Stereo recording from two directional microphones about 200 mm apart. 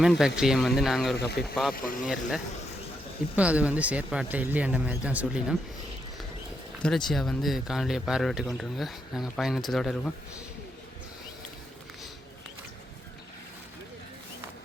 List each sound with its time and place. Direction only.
0.0 s speech: 5° right (ahead or behind)
1.7 s speech: 45° left (ahead or behind)
3.3 s speech: 5° right (ahead or behind)
6.8 s speech: centre (ahead or behind)